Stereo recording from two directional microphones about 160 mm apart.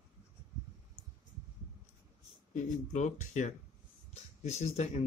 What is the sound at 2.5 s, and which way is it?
Speech, 50° left (ahead or behind).